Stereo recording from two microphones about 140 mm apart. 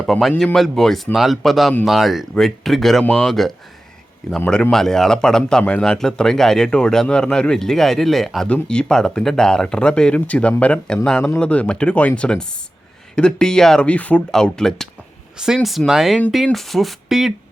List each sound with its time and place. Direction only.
0.0 s a man's voice: centre (ahead or behind)